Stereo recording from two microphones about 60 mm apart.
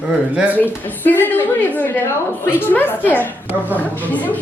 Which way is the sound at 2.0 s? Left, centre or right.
Left.